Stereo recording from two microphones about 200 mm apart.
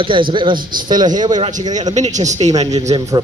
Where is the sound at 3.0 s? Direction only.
20° right (ahead or behind).